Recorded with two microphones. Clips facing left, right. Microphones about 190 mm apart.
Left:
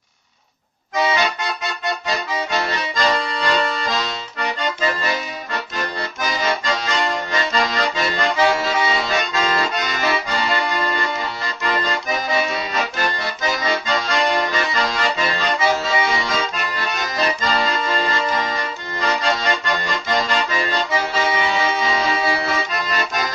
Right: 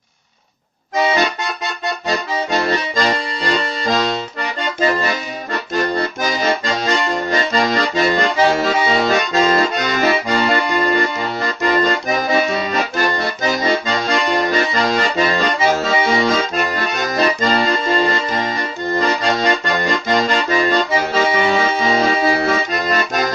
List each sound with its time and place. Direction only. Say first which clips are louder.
2.0 s accordion: right 6 dB; 45° right (ahead or behind)